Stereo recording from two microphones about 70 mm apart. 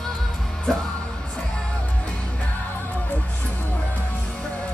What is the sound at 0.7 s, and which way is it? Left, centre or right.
Music, centre.